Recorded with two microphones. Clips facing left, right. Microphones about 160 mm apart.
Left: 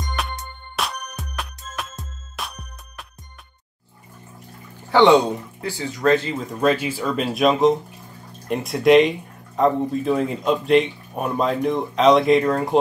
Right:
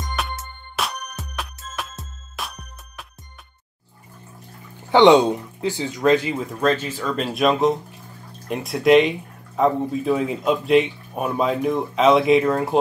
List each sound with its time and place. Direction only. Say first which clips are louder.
0.0 s music: even; centre (ahead or behind)
4.9 s speech: right 1 dB; 15° right (ahead or behind)
6.5 s speech: left 2 dB; 10° left (ahead or behind)